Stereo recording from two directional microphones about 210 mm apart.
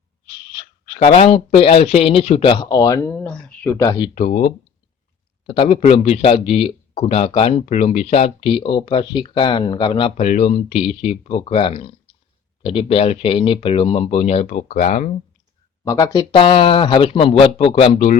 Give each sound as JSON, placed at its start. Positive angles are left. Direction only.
{"t": 0.9, "sound": "speech", "side_deg": 30}
{"t": 4.1, "sound": "speech", "side_deg": 40}
{"t": 5.5, "sound": "speech", "side_deg": 25}
{"t": 15.8, "sound": "speech", "side_deg": 15}